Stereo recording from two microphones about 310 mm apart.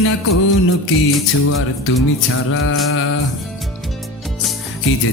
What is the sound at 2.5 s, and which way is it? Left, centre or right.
Music, left.